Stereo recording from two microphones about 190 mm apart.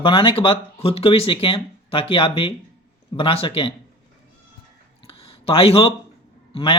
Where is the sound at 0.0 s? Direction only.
25° left (ahead or behind).